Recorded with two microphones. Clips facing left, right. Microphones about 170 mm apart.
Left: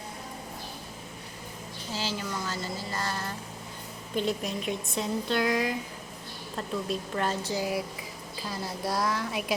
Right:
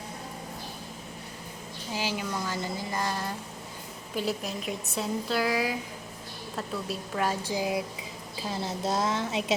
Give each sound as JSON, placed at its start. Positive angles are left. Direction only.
{"t": 1.9, "sound": "a sound", "side_deg": -15}
{"t": 4.1, "sound": "speech", "side_deg": -5}
{"t": 6.8, "sound": "a woman's voice", "side_deg": -5}